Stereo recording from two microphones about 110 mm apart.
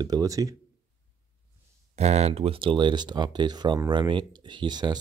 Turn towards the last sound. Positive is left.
turn(degrees=-40)  # may be behind; listen again after turning